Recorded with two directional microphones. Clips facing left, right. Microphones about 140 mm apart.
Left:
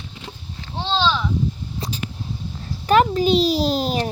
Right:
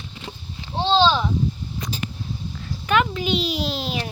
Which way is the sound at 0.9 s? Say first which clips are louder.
Right 3 dB; 30° right (ahead or behind).